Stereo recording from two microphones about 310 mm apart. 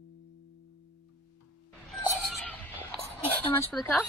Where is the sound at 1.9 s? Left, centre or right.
Centre.